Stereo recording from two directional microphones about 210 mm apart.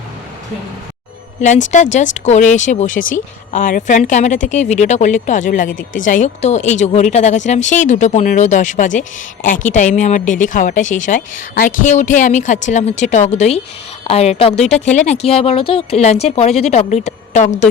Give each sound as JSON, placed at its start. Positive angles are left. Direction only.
{"t": 1.4, "sound": "speech", "side_deg": 35}